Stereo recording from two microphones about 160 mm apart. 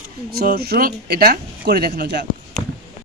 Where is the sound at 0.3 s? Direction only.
80° right.